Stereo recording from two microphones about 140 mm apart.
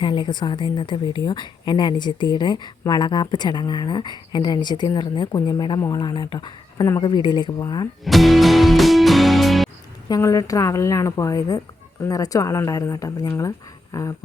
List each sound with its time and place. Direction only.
0.0 s a woman's voice: 35° left (ahead or behind)
8.0 s music: centre (ahead or behind)
10.1 s a woman's voice: 25° left (ahead or behind)